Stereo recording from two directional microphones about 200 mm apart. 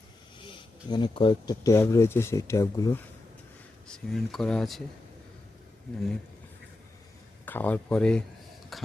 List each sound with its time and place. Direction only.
0.3 s speech: 25° left (ahead or behind)
3.8 s speech: centre (ahead or behind)
7.4 s speech: 10° left (ahead or behind)
8.7 s a sound: centre (ahead or behind)